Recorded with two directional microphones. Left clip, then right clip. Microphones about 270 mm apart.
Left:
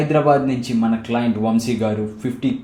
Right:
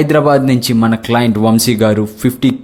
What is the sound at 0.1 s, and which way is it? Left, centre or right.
Speech, right.